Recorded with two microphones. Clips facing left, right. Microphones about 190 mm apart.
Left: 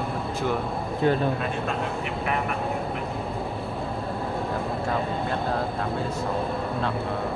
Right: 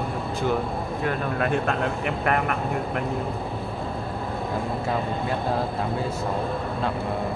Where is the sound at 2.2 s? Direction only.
60° right (ahead or behind).